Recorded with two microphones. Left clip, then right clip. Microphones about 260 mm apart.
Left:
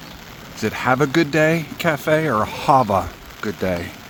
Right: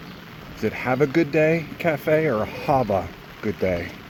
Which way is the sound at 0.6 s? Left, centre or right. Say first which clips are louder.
Left 3 dB; left.